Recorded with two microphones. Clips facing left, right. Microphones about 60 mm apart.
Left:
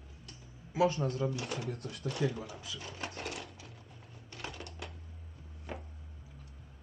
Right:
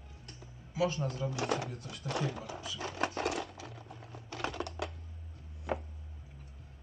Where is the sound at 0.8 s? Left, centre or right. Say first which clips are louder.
Left 3 dB; left.